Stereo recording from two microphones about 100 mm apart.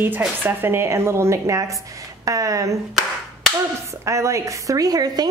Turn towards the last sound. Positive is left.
turn(degrees=-40)  # may be behind; listen again after turning